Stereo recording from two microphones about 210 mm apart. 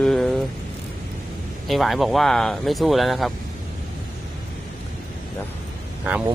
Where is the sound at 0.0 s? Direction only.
Centre (ahead or behind).